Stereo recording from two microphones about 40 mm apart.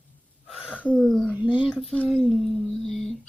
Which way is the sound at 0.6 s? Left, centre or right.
Left.